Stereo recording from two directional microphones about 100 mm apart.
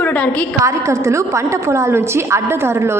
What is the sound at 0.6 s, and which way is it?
A woman's voice, 30° right (ahead or behind).